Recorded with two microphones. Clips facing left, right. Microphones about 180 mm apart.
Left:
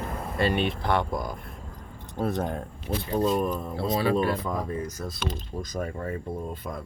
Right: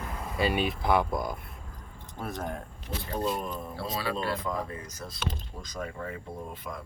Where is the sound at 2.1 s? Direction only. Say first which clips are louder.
Left 8 dB; 25° left (ahead or behind).